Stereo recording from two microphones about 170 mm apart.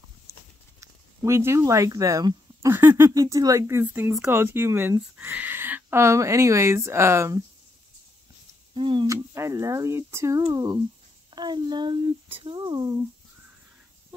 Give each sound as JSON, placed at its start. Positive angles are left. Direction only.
{"t": 0.3, "sound": "a sound", "side_deg": -15}
{"t": 0.7, "sound": "speech", "side_deg": -15}
{"t": 8.7, "sound": "speech", "side_deg": -30}